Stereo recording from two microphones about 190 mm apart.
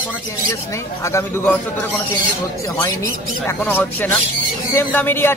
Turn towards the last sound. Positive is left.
turn(degrees=10)  # may be behind; listen again after turning